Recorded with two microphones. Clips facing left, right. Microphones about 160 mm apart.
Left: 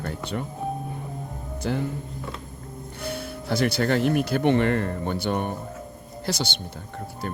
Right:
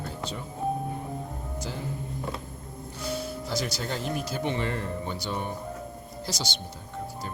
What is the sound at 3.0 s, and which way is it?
Speech, 60° left (ahead or behind).